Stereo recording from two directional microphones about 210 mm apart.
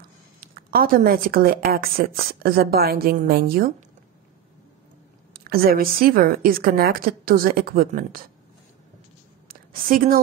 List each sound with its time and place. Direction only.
0.4 s speech: 45° right (ahead or behind)
5.3 s speech: 45° right (ahead or behind)
9.5 s a sound: 40° right (ahead or behind)